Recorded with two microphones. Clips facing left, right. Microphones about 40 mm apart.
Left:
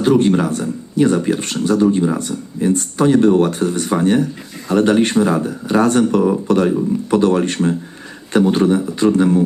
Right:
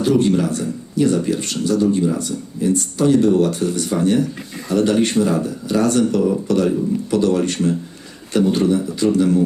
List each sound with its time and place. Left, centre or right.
0.0 s speech: left